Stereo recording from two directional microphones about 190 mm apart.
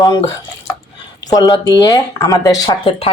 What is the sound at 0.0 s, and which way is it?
Speech, 20° left (ahead or behind).